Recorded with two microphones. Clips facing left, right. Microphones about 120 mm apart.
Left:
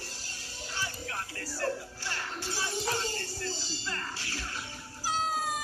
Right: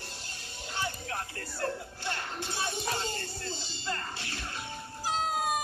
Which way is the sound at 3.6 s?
20° right (ahead or behind).